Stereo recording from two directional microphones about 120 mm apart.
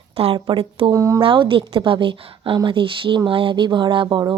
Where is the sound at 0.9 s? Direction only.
25° right (ahead or behind).